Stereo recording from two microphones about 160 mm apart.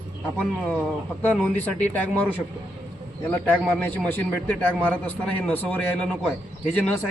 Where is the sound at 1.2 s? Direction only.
10° left (ahead or behind).